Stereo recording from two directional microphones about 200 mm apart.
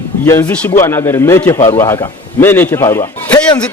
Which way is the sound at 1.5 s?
35° left (ahead or behind).